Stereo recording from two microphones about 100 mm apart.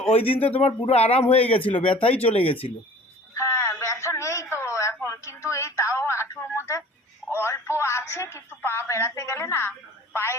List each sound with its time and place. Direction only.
0.1 s speech: 70° left (ahead or behind)
0.3 s a man's voice: 15° left (ahead or behind)
0.6 s speech: 90° left
1.3 s speech: 70° left (ahead or behind)
3.3 s a sound: 25° left (ahead or behind)
5.0 s telephone: 30° left (ahead or behind)
7.3 s speech: 25° left (ahead or behind)